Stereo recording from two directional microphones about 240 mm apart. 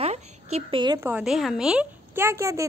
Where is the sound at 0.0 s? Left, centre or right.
Right.